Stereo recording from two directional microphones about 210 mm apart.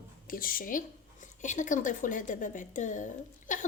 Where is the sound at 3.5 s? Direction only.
35° left (ahead or behind).